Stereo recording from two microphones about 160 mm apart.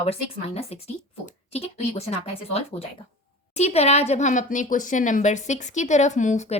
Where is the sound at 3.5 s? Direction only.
40° left (ahead or behind).